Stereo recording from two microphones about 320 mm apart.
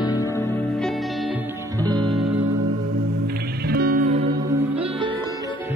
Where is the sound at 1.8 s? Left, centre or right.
Centre.